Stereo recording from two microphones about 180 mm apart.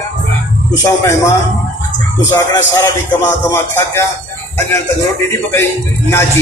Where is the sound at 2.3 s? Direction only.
15° left (ahead or behind).